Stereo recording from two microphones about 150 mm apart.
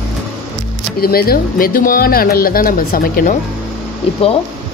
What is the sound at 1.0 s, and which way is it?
Speech, 90° left.